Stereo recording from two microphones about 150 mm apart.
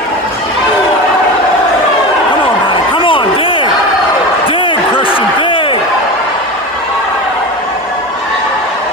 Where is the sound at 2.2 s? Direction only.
35° left (ahead or behind).